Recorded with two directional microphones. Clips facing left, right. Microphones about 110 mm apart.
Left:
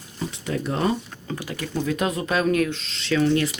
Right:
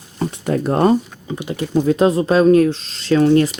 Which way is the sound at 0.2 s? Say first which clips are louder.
Right 8 dB; 50° right (ahead or behind).